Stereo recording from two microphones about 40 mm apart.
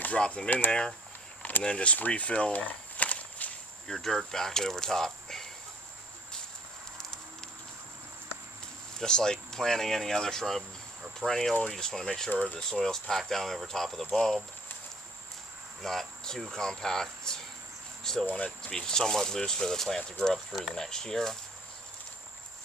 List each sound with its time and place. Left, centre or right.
0.3 s speech: left
1.4 s a sound: left
1.6 s speech: left
2.0 s walk: left
3.8 s speech: centre
9.0 s speech: centre
15.8 s speech: centre
18.0 s a sound: centre
18.3 s speech: left
18.7 s speech: centre
20.5 s speech: centre
20.7 s speech: centre